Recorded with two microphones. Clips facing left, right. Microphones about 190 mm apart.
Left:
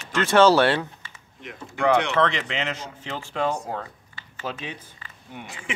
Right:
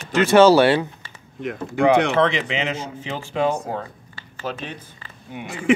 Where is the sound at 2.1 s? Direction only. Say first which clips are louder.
Right 4 dB; 10° right (ahead or behind).